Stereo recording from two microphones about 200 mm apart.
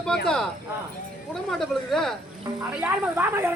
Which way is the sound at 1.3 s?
Centre (ahead or behind).